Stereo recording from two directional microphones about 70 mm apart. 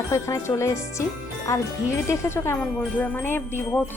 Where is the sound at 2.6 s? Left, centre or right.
Centre.